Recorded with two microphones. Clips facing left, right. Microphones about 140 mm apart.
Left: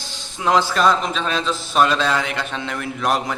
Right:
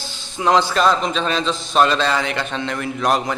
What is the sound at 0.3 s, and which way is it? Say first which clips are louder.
A man's voice: right 2 dB; centre (ahead or behind).